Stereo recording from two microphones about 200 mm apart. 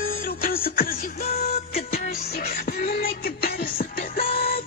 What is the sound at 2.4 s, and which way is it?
Music, 50° left (ahead or behind).